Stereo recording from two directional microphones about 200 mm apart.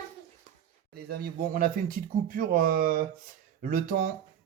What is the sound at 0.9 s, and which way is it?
Speech, 50° right (ahead or behind).